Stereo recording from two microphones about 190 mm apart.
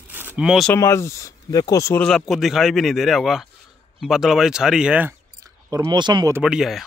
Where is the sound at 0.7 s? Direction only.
15° left (ahead or behind).